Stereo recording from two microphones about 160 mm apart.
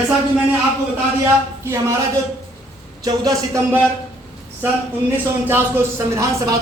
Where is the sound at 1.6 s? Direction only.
15° right (ahead or behind).